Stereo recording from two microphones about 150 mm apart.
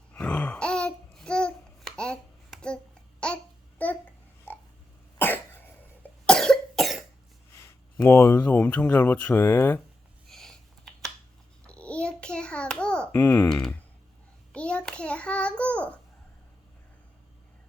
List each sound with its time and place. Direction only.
0.1 s babbling: 10° left (ahead or behind)
5.2 s cough: 15° left (ahead or behind)
7.6 s speech: 20° left (ahead or behind)
10.2 s computer keyboard: 5° left (ahead or behind)
11.6 s hands: 10° left (ahead or behind)
13.1 s speech: 15° left (ahead or behind)
13.5 s speech: 5° left (ahead or behind)
14.5 s child singing: 5° left (ahead or behind)